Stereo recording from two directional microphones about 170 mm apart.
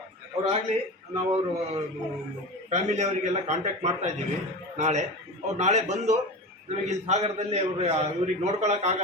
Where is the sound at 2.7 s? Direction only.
40° right (ahead or behind).